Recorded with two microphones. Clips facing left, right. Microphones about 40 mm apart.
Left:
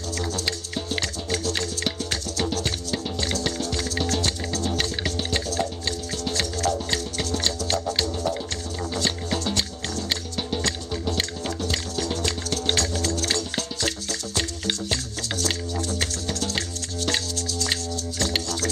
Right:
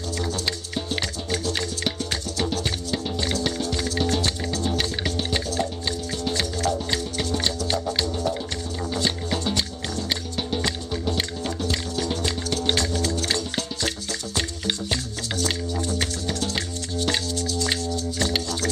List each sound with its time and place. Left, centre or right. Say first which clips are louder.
0.2 s music: even; centre
7.8 s music: even; centre
9.4 s music: right 1 dB; centre